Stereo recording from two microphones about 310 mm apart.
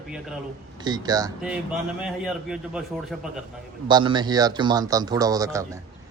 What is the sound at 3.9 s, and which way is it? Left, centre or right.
Speech, centre.